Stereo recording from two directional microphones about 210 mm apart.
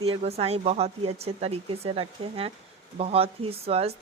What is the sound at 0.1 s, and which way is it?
Speech, 30° right (ahead or behind).